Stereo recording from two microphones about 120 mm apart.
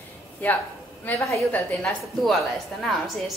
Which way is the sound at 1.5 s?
10° left (ahead or behind).